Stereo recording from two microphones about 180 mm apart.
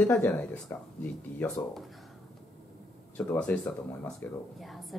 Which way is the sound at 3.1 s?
10° left (ahead or behind).